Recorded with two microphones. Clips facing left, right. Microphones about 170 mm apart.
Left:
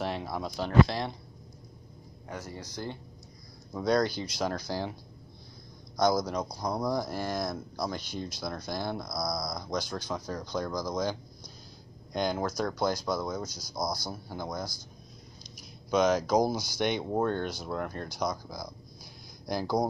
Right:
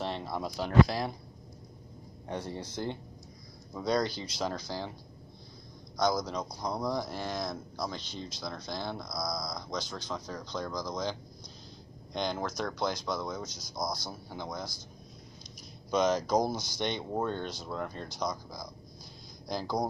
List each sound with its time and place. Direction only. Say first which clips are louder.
0.0 s a sound: left 2 dB; 5° left (ahead or behind)
0.4 s speech: even; 5° right (ahead or behind)
2.2 s speech: right 3 dB; 30° right (ahead or behind)
3.7 s speech: left 3 dB; centre (ahead or behind)
5.9 s speech: left 3 dB; 10° left (ahead or behind)
15.9 s speech: left 2 dB; 5° left (ahead or behind)